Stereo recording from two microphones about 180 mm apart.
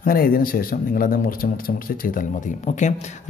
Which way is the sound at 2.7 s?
40° left (ahead or behind).